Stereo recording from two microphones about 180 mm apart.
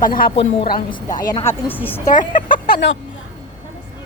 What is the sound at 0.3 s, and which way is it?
Speech, 30° left (ahead or behind).